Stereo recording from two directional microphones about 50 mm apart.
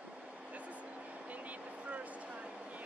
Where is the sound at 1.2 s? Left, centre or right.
Right.